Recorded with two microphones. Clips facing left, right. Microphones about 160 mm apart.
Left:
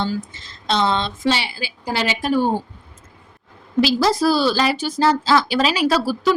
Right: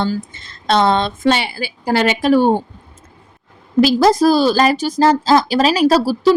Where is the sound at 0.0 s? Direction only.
55° right (ahead or behind).